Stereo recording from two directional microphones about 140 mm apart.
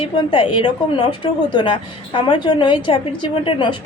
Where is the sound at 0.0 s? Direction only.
40° left (ahead or behind).